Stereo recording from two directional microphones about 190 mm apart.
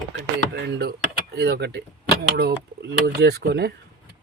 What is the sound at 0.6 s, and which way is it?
Speech, 65° right (ahead or behind).